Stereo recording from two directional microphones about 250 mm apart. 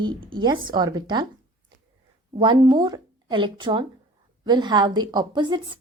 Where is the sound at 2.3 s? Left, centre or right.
Centre.